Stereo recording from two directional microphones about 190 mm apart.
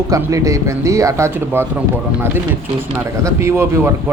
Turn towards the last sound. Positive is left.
turn(degrees=-15)  # may be behind; listen again after turning